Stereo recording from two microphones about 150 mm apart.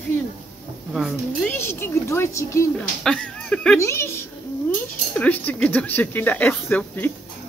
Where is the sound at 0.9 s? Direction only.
5° right (ahead or behind).